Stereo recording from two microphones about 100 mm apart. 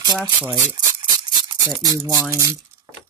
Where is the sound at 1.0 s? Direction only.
50° right (ahead or behind).